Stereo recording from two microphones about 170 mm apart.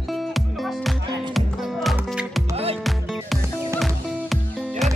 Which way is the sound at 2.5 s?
35° right (ahead or behind).